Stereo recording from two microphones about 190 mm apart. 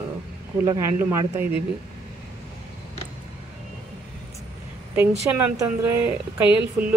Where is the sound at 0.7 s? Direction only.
20° right (ahead or behind).